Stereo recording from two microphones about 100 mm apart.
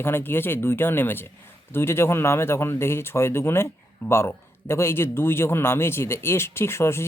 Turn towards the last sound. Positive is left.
turn(degrees=25)  # may be behind; listen again after turning